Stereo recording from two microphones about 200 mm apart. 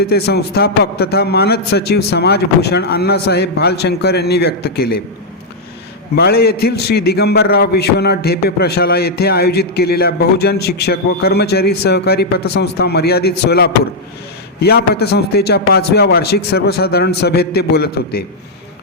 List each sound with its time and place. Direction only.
0.0 s a man's voice: 55° left (ahead or behind)
6.1 s a man's voice: 50° left (ahead or behind)